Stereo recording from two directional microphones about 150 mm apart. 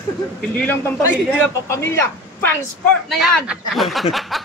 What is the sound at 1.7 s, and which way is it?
Speech, 20° left (ahead or behind).